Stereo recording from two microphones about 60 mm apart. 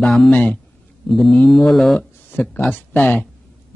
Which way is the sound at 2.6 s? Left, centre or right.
Left.